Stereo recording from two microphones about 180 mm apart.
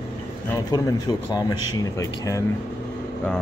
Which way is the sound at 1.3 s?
20° left (ahead or behind).